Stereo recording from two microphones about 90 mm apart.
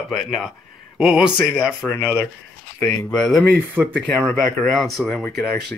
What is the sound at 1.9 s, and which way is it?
Speech, 25° left (ahead or behind).